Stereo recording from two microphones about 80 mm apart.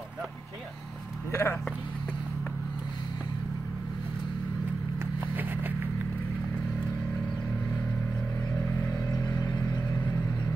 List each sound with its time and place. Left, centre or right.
1.3 s speech: left
5.3 s a sound: right
9.4 s vehicle: left